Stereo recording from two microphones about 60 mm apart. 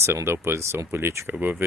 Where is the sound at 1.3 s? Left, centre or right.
Right.